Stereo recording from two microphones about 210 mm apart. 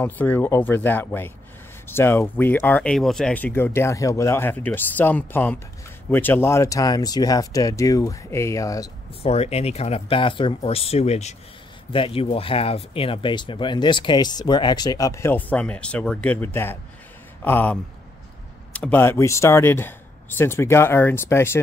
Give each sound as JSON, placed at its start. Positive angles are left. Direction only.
{"t": 0.0, "sound": "speech", "side_deg": 10}
{"t": 9.2, "sound": "speech", "side_deg": 30}